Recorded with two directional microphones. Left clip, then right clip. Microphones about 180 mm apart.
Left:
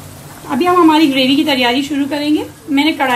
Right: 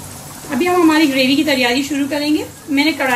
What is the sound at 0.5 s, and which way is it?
A woman's voice, 30° left (ahead or behind).